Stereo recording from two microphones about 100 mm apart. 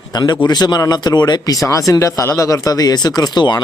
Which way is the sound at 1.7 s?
35° left (ahead or behind).